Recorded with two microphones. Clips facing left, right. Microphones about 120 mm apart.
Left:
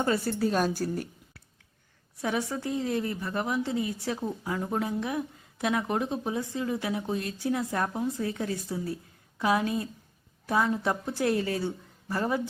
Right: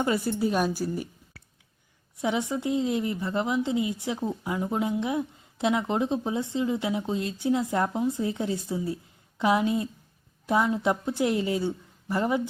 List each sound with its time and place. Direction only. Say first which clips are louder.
0.0 s a woman's voice: right 1 dB; 15° right (ahead or behind)
2.2 s a woman's voice: right 3 dB; 20° right (ahead or behind)